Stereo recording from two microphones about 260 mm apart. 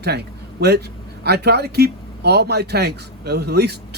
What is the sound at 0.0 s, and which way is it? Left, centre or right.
A man's voice, right.